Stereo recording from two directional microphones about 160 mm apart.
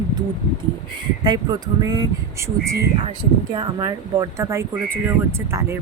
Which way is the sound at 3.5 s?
25° right (ahead or behind).